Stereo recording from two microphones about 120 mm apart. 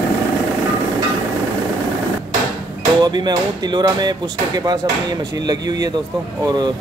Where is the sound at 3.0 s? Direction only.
35° right (ahead or behind).